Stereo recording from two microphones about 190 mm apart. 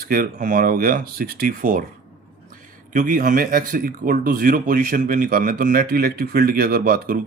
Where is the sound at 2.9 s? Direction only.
45° right (ahead or behind).